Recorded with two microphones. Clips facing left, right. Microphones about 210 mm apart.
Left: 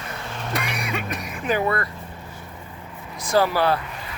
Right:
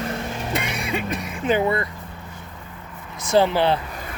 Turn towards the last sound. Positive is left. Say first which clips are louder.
# right 2 dB
turn(degrees=-25)  # may be behind; listen again after turning